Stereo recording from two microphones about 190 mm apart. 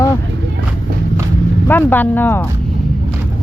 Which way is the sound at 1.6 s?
10° left (ahead or behind).